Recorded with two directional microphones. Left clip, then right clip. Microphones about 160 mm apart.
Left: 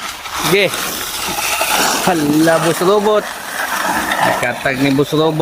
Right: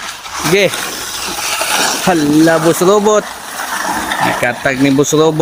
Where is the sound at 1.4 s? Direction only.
35° left (ahead or behind).